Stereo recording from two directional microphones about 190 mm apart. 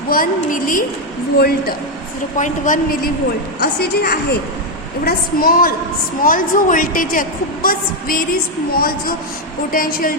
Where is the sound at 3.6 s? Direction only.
55° left (ahead or behind).